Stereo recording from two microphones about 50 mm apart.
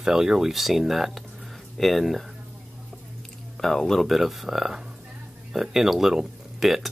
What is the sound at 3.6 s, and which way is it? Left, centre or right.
Speech, centre.